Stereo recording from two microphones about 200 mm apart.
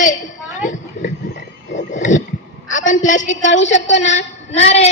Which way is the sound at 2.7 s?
40° left (ahead or behind).